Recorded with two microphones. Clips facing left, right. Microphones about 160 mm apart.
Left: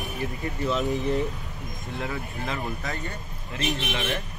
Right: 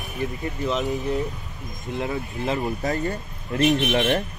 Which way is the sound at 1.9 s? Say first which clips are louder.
Right 5 dB; 30° right (ahead or behind).